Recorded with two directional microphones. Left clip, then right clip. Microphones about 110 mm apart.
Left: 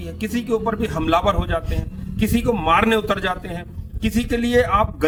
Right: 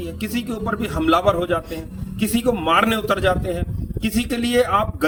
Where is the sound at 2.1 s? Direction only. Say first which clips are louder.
Even; 40° left (ahead or behind).